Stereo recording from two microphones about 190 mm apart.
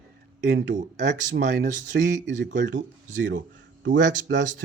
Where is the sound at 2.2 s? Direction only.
70° right (ahead or behind).